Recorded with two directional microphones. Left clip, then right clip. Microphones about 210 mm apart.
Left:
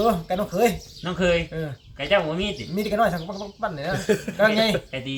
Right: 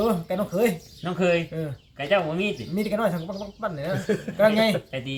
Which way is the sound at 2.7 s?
10° left (ahead or behind).